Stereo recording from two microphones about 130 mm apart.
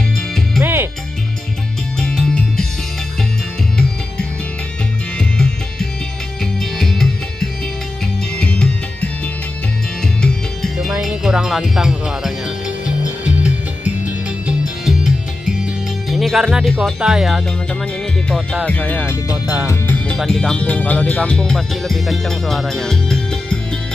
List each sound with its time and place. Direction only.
0.6 s music: 15° right (ahead or behind)
2.0 s music: 5° left (ahead or behind)
6.4 s music: centre (ahead or behind)
10.2 s music: centre (ahead or behind)
16.8 s speech: 5° right (ahead or behind)
19.3 s music: 10° right (ahead or behind)
19.7 s music: 15° left (ahead or behind)
20.2 s speech: 5° left (ahead or behind)